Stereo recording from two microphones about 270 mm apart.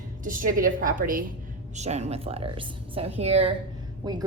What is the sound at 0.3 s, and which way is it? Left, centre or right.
A woman's voice, right.